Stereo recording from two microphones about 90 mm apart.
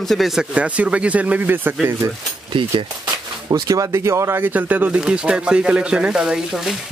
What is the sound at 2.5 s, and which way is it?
Speech, 70° right (ahead or behind).